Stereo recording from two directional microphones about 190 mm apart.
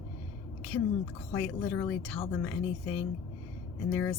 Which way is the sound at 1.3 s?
10° left (ahead or behind).